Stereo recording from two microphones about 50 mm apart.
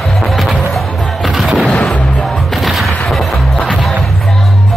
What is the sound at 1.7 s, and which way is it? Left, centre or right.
Music, centre.